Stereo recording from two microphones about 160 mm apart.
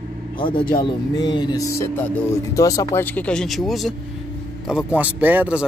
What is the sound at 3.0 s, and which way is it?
Speech, 10° left (ahead or behind).